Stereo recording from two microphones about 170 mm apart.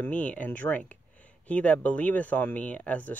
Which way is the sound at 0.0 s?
10° left (ahead or behind).